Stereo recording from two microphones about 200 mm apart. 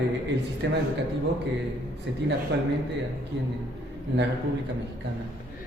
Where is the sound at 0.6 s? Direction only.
55° right (ahead or behind).